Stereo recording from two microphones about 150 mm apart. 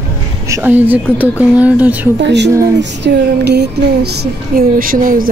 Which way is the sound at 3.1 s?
90° right.